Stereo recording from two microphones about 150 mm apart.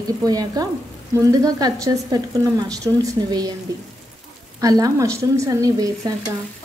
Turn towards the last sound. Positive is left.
turn(degrees=-25)  # may be behind; listen again after turning